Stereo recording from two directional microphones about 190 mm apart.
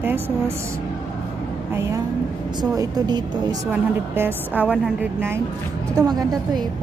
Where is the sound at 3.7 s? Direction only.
10° right (ahead or behind).